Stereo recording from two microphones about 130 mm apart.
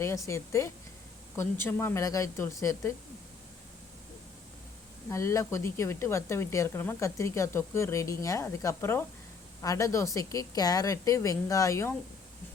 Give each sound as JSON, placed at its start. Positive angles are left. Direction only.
{"t": 0.0, "sound": "speech", "side_deg": 20}
{"t": 5.0, "sound": "speech", "side_deg": 20}